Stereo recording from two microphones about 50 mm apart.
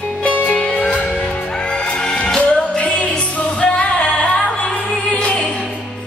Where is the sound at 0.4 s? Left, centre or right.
Left.